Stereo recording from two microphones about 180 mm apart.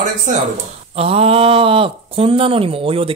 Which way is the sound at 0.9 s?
35° right (ahead or behind).